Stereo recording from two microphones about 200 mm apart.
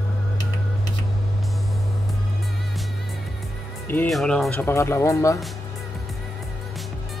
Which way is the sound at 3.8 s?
5° left (ahead or behind).